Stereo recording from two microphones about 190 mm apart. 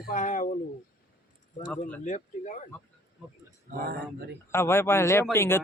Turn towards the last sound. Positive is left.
turn(degrees=10)  # may be behind; listen again after turning